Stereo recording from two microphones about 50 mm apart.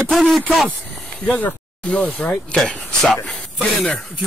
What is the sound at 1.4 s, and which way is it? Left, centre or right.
Speech, left.